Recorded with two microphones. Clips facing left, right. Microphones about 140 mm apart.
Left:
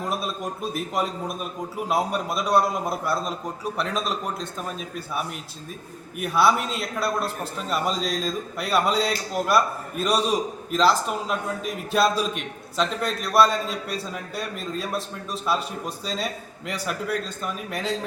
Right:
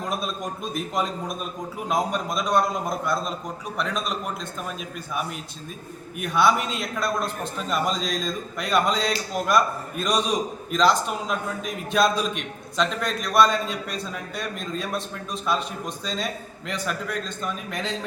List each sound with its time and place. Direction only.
0.1 s a man's voice: 5° left (ahead or behind)
4.4 s a man's voice: 35° left (ahead or behind)
6.1 s a man's voice: 5° left (ahead or behind)